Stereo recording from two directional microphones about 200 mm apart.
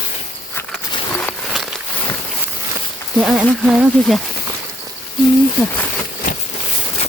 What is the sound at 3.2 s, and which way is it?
Speech, 5° right (ahead or behind).